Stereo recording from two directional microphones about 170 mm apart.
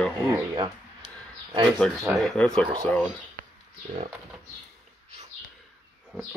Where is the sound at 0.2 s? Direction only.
25° right (ahead or behind).